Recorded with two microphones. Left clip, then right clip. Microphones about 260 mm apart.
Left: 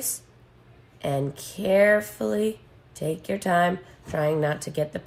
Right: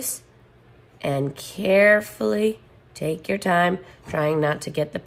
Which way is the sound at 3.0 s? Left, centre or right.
Right.